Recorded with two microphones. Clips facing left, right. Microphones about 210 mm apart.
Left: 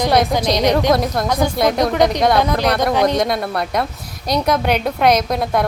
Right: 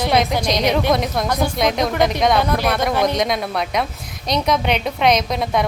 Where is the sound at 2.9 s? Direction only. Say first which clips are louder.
Left 3 dB; 15° left (ahead or behind).